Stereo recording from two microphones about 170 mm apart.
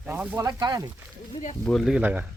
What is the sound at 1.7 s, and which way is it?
Speech, centre (ahead or behind).